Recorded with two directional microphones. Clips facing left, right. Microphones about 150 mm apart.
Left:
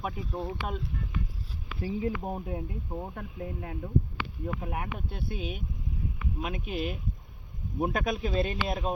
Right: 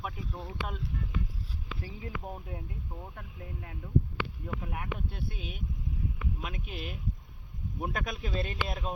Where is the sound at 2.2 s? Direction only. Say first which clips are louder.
Left 7 dB; 35° left (ahead or behind).